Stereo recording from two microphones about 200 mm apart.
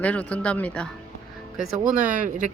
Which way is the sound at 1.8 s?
40° right (ahead or behind).